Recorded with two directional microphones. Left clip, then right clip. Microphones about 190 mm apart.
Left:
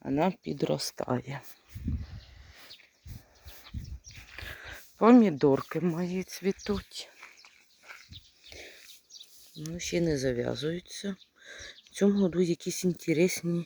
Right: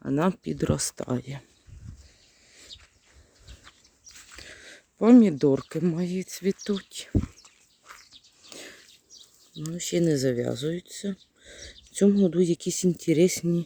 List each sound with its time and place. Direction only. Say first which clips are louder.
0.1 s speech: right 2 dB; 35° right (ahead or behind)
4.2 s speech: left 2 dB; 30° right (ahead or behind)
8.4 s a sound: right 4 dB; 40° right (ahead or behind)
9.6 s speech: right 4 dB; 25° right (ahead or behind)